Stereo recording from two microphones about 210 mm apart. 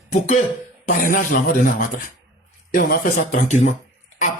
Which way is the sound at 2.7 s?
40° left (ahead or behind).